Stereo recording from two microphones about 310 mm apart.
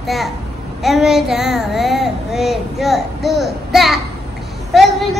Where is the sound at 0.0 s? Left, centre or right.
Centre.